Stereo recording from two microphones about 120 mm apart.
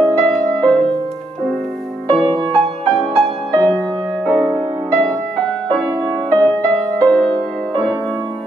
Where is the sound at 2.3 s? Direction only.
40° right (ahead or behind).